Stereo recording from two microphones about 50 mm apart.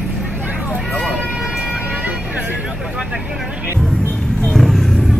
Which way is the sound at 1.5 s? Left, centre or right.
Right.